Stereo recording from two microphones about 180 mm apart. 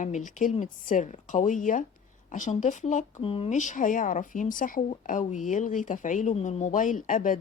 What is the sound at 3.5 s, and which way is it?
A woman's voice, 45° left (ahead or behind).